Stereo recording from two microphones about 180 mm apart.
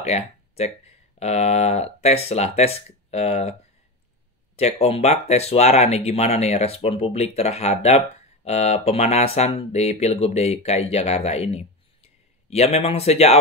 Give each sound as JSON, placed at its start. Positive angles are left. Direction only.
{"t": 0.0, "sound": "speech", "side_deg": 35}
{"t": 4.6, "sound": "speech", "side_deg": 35}